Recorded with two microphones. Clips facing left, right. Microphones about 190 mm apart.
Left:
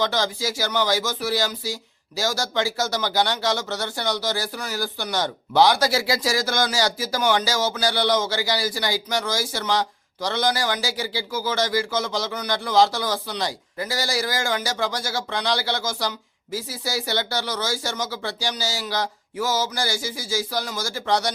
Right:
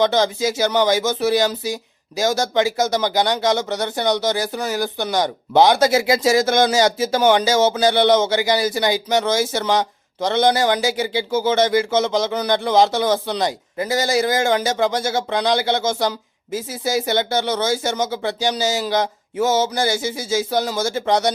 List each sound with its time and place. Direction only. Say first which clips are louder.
0.0 s speech: right 7 dB; 20° right (ahead or behind)